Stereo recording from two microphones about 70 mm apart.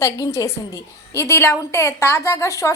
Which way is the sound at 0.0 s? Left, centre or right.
Left.